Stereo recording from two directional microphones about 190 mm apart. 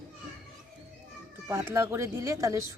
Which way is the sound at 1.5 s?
15° right (ahead or behind).